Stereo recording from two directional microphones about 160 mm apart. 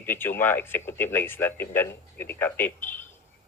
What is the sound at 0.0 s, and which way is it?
Speech, 15° left (ahead or behind).